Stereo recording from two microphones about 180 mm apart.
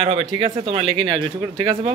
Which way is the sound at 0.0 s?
35° right (ahead or behind).